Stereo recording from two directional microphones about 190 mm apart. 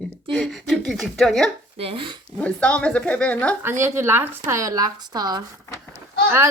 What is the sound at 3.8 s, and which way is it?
A woman's voice, 15° right (ahead or behind).